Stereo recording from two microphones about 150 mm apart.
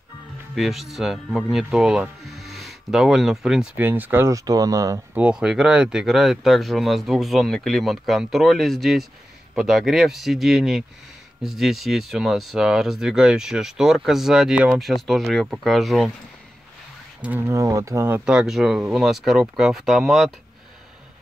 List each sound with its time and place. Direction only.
0.6 s speech: centre (ahead or behind); by 5.2 s 20° right (ahead or behind)
5.2 s speech: 5° right (ahead or behind)
17.2 s speech: 10° right (ahead or behind)
17.6 s speech: 20° right (ahead or behind)
18.2 s speech: 5° right (ahead or behind)